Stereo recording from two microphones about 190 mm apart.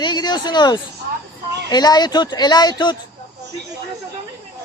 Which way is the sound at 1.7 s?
20° left (ahead or behind).